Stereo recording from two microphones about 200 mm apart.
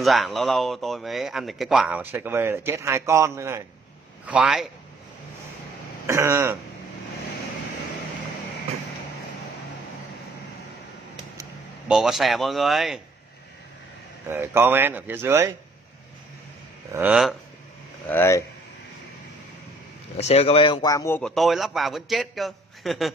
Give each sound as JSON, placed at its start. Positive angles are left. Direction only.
{"t": 0.0, "sound": "speech", "side_deg": 0}
{"t": 4.3, "sound": "speech", "side_deg": -5}
{"t": 6.0, "sound": "speech", "side_deg": -15}
{"t": 11.9, "sound": "speech", "side_deg": 0}
{"t": 14.2, "sound": "speech", "side_deg": -10}
{"t": 16.9, "sound": "speech", "side_deg": -5}
{"t": 18.1, "sound": "speech", "side_deg": 15}
{"t": 20.2, "sound": "speech", "side_deg": 30}
{"t": 21.2, "sound": "speech", "side_deg": 0}